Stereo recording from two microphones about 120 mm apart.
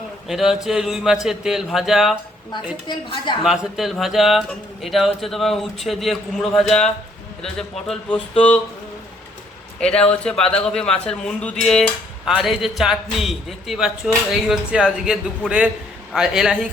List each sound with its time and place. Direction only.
0.3 s a man's voice: 5° right (ahead or behind)
2.8 s a woman's voice: 40° left (ahead or behind)
3.4 s a man's voice: 5° right (ahead or behind)
9.8 s a man's voice: 10° left (ahead or behind)